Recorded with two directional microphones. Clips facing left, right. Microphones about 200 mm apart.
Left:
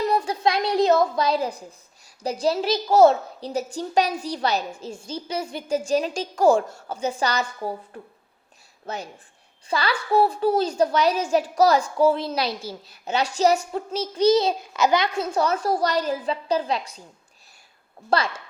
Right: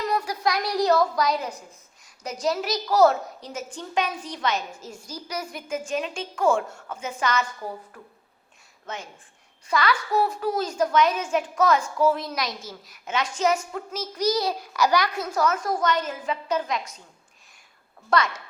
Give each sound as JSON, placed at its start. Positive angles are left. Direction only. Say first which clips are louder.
{"t": 0.0, "sound": "a woman's voice", "louder": "left 4 dB", "side_deg": 30}
{"t": 18.1, "sound": "a woman's voice", "louder": "even", "side_deg": 30}